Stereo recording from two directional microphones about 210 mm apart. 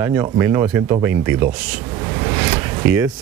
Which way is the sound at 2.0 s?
15° right (ahead or behind).